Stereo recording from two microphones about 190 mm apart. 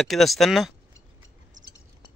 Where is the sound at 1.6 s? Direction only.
40° right (ahead or behind).